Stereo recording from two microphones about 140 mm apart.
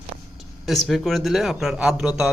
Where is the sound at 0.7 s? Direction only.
Centre (ahead or behind).